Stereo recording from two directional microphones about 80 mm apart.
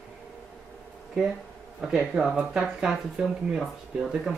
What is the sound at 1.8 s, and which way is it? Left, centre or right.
Speech, centre.